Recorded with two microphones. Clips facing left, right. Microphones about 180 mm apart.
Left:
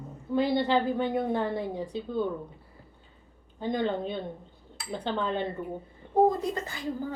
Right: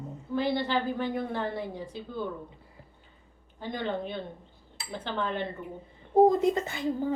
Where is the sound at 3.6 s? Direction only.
20° left (ahead or behind).